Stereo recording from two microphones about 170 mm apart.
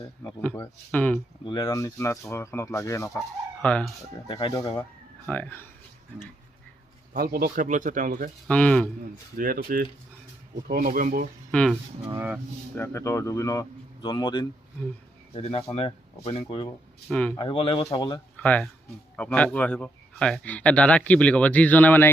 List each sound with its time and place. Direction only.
0.3 s speech: 10° left (ahead or behind)
1.5 s speech: 20° left (ahead or behind)
4.3 s speech: 30° left (ahead or behind)
4.8 s speech: 10° left (ahead or behind)
7.1 s speech: 60° right (ahead or behind)
8.4 s speech: 5° left (ahead or behind)
9.4 s speech: 60° right (ahead or behind)
11.5 s speech: 5° left (ahead or behind)
12.1 s speech: 10° right (ahead or behind)
12.7 s speech: 15° left (ahead or behind); by 16.7 s 35° left (ahead or behind)
17.1 s speech: 10° left (ahead or behind)
17.3 s speech: 30° left (ahead or behind)
17.9 s speech: 20° left (ahead or behind)
18.3 s speech: 10° left (ahead or behind)